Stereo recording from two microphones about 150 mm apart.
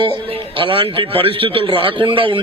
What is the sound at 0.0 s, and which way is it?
A man's voice, 35° right (ahead or behind).